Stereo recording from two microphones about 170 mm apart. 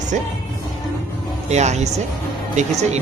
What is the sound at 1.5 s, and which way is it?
Speech, 40° right (ahead or behind).